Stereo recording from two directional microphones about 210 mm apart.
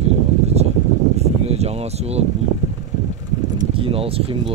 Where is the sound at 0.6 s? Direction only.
30° right (ahead or behind).